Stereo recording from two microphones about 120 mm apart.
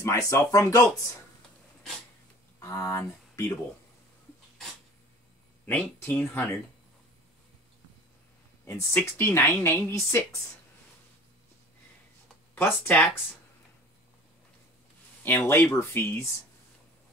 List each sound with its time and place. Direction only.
0.3 s speech: 25° left (ahead or behind)
2.6 s speech: 25° left (ahead or behind)
5.7 s speech: 15° left (ahead or behind)
8.6 s speech: 20° left (ahead or behind)
12.5 s speech: 15° left (ahead or behind)
15.2 s speech: 20° left (ahead or behind)